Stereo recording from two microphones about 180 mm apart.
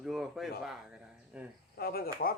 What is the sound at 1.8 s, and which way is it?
Speech, 55° left (ahead or behind).